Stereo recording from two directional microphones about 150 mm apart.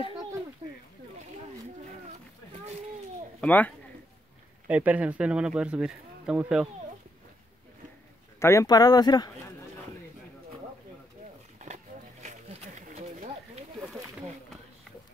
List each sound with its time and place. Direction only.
3.3 s speech: 10° left (ahead or behind)
4.6 s speech: 10° right (ahead or behind)
8.4 s speech: 20° left (ahead or behind)
11.6 s wild animals: 50° right (ahead or behind)
12.8 s a sound: 50° right (ahead or behind)